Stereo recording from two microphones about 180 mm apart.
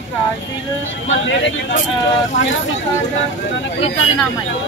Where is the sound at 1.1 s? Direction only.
90° left.